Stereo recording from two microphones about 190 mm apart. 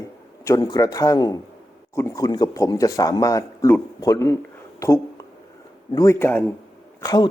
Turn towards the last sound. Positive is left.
turn(degrees=20)  # may be behind; listen again after turning